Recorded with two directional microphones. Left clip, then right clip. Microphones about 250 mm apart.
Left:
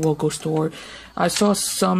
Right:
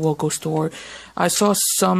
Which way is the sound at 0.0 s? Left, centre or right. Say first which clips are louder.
Even; centre.